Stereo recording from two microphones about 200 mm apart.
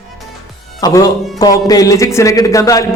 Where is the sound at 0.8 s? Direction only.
20° left (ahead or behind).